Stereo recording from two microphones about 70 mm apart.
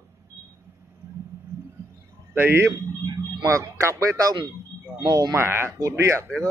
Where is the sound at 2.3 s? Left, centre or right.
Right.